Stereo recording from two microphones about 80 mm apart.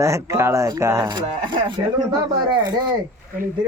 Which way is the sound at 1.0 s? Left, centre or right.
Right.